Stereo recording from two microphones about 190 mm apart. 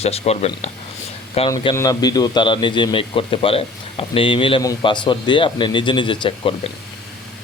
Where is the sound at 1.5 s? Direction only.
20° left (ahead or behind).